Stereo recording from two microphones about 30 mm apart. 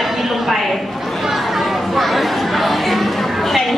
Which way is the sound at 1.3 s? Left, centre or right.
Centre.